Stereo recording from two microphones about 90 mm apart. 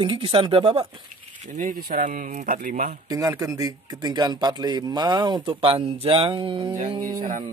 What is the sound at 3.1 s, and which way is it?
Speech, 40° right (ahead or behind).